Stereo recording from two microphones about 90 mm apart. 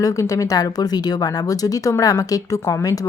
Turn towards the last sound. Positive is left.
turn(degrees=40)  # may be behind; listen again after turning